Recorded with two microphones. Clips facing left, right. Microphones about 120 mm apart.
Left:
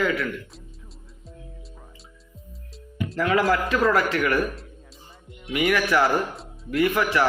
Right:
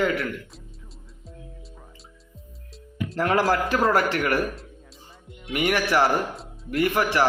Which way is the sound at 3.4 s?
30° right (ahead or behind).